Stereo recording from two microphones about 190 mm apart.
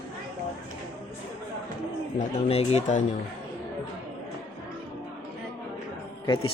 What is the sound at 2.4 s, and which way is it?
Speech, 30° left (ahead or behind).